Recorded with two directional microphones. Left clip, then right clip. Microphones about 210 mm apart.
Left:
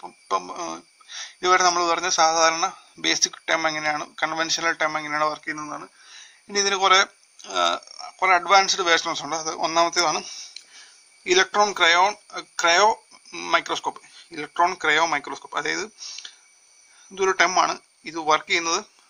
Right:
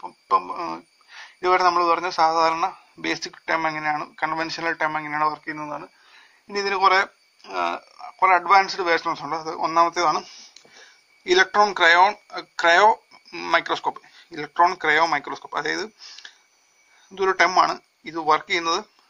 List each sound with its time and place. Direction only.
0.0 s speech: 50° left (ahead or behind)
11.2 s speech: 35° left (ahead or behind)